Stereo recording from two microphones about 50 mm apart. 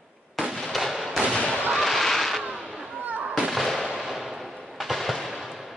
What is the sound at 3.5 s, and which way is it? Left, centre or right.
Fireworks, centre.